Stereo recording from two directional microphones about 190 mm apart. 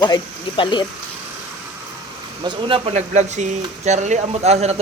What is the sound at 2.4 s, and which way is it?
A man's voice, 30° right (ahead or behind).